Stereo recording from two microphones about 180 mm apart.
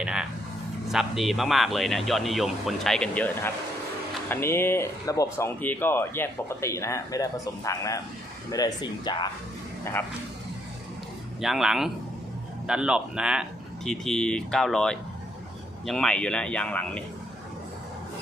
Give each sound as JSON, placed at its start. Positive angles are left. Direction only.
{"t": 0.0, "sound": "dog", "side_deg": -5}
{"t": 0.9, "sound": "a man's voice", "side_deg": 0}
{"t": 11.3, "sound": "a man's voice", "side_deg": 0}